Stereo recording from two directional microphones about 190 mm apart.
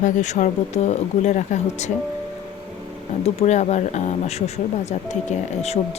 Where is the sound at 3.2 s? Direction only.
35° left (ahead or behind).